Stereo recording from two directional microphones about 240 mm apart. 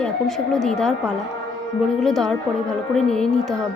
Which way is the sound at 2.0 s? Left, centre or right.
Centre.